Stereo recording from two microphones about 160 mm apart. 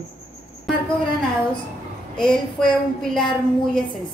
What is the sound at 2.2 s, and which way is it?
Speech, 5° left (ahead or behind).